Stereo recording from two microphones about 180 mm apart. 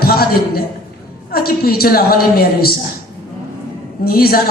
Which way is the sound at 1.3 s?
55° left (ahead or behind).